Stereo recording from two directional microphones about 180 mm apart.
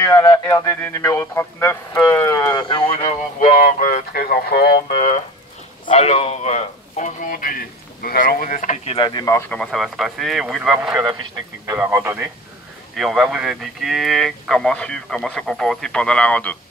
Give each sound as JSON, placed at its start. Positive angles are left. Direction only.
{"t": 0.0, "sound": "speech", "side_deg": 20}
{"t": 2.9, "sound": "a man's voice", "side_deg": 40}
{"t": 8.9, "sound": "speech", "side_deg": 25}
{"t": 9.2, "sound": "speech", "side_deg": 15}
{"t": 9.6, "sound": "speech", "side_deg": 0}
{"t": 12.9, "sound": "speech", "side_deg": 0}